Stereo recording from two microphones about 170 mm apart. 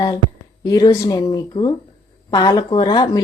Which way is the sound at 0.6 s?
20° left (ahead or behind).